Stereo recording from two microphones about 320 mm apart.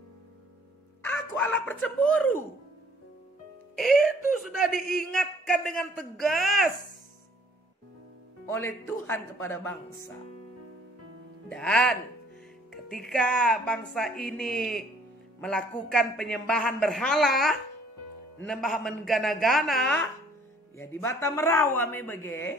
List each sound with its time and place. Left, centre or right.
1.0 s speech: centre
3.7 s speech: centre
4.7 s a man's voice: left
5.1 s a man's voice: centre
8.5 s speech: centre
11.4 s a man's voice: centre